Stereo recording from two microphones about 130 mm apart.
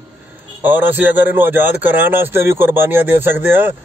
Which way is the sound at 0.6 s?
15° right (ahead or behind).